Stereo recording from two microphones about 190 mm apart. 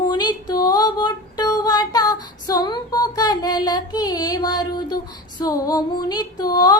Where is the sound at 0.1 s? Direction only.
25° left (ahead or behind).